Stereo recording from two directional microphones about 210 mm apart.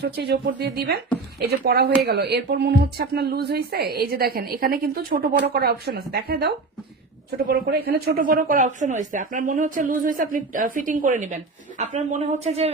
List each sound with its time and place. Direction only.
0.0 s a woman's voice: 50° right (ahead or behind); by 12.7 s 30° right (ahead or behind)